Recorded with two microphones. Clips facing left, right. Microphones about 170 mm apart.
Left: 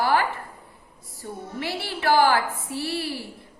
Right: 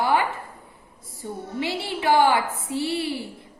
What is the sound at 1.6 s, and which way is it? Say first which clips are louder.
A woman's voice: right 3 dB; 20° right (ahead or behind).